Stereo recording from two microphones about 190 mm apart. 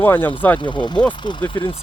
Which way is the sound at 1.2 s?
25° left (ahead or behind).